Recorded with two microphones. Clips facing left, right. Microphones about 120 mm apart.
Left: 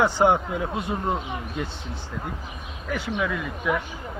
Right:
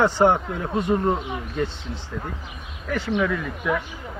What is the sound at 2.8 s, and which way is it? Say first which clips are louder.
Speech: right 4 dB; 5° left (ahead or behind).